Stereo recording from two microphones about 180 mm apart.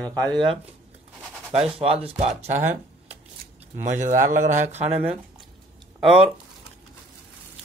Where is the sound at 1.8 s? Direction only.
35° right (ahead or behind).